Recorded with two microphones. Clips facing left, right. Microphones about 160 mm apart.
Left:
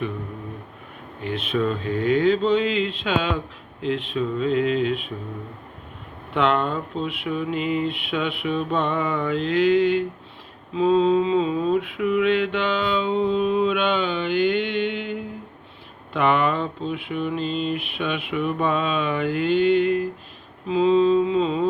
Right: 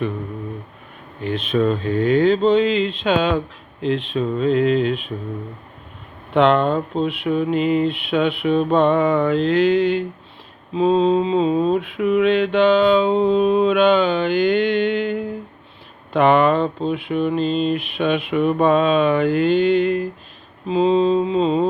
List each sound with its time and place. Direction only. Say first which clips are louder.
1.5 s mantra: right 5 dB; 35° right (ahead or behind)
6.3 s mantra: right 6 dB; 30° right (ahead or behind)
19.7 s a sound: right 2 dB; 5° left (ahead or behind)
20.7 s mantra: right 1 dB; 30° right (ahead or behind)